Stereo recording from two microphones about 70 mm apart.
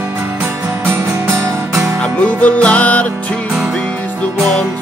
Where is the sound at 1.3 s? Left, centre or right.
Right.